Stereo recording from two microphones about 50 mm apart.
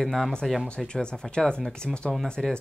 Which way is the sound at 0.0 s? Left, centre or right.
Centre.